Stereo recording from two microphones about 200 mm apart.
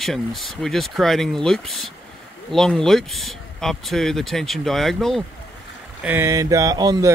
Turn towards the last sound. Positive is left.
turn(degrees=-20)  # may be behind; listen again after turning